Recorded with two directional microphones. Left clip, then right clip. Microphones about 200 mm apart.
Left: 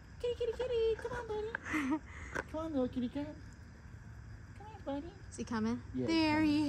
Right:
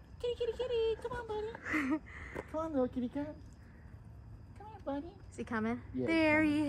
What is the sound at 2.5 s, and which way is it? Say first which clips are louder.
Speech: right 4 dB; centre (ahead or behind).